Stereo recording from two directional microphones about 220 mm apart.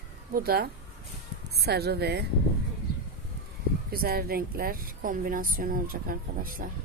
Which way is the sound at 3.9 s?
45° right (ahead or behind).